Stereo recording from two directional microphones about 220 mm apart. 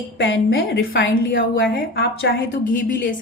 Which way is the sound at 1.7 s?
45° left (ahead or behind).